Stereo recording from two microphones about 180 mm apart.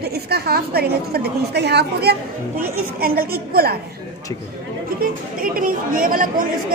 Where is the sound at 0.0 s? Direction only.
60° right (ahead or behind).